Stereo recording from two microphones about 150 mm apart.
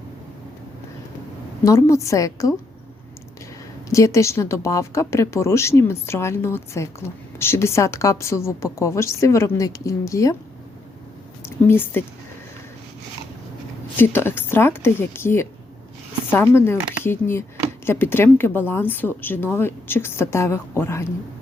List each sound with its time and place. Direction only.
1.6 s speech: 20° left (ahead or behind)
3.8 s speech: 20° left (ahead or behind)
11.4 s speech: 15° left (ahead or behind)
13.9 s a woman's voice: 15° left (ahead or behind)